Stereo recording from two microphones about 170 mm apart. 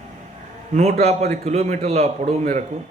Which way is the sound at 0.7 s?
40° right (ahead or behind).